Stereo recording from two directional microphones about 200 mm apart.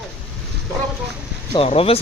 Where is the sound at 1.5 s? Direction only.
30° left (ahead or behind).